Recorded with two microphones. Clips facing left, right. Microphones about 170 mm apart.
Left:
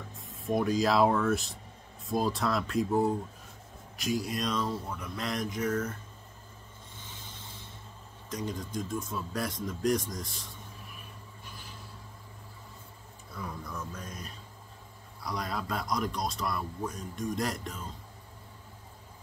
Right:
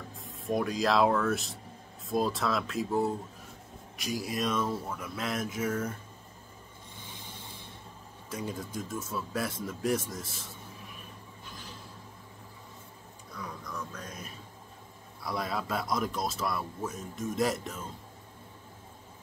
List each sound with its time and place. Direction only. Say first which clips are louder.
0.1 s speech: left 1 dB; centre (ahead or behind)
7.0 s vehicle: right 2 dB; 10° right (ahead or behind)
8.3 s speech: left 1 dB; 5° right (ahead or behind)
15.2 s speech: right 2 dB; 5° right (ahead or behind)